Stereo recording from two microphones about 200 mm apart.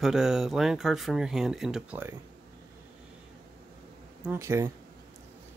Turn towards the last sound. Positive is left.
turn(degrees=-15)  # may be behind; listen again after turning